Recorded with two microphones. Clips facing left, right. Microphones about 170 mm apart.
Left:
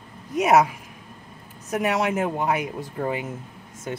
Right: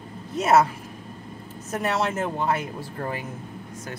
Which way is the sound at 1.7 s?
15° left (ahead or behind).